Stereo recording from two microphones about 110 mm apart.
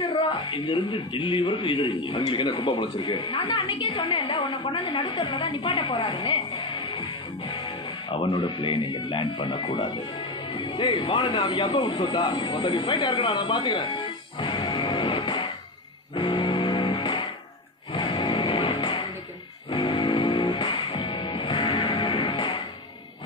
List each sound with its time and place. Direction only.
0.5 s speech: 50° left (ahead or behind)
3.3 s a woman's voice: 50° left (ahead or behind)
10.5 s speech: 50° left (ahead or behind)
16.2 s music: 45° left (ahead or behind)